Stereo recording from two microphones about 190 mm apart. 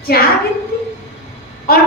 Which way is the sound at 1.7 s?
55° left (ahead or behind).